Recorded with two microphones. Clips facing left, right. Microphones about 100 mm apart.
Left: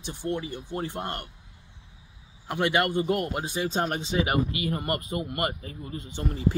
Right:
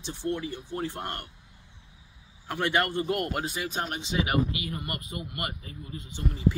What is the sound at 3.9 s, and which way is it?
Speech, 45° left (ahead or behind).